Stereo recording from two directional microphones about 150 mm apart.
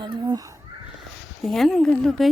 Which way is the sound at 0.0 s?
30° right (ahead or behind).